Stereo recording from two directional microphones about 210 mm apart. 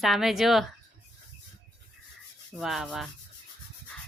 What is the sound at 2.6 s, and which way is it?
Speech, centre (ahead or behind).